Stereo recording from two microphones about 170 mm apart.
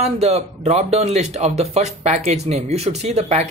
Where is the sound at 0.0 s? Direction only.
40° right (ahead or behind).